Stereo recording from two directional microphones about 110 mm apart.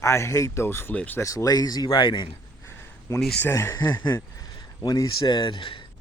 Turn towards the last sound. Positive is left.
turn(degrees=50)  # may be behind; listen again after turning